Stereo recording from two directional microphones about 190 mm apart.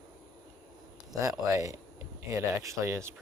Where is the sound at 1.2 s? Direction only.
15° right (ahead or behind).